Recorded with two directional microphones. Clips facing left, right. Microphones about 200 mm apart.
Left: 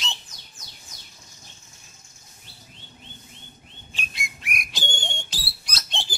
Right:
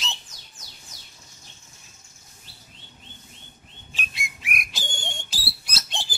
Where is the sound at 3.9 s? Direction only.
Centre (ahead or behind).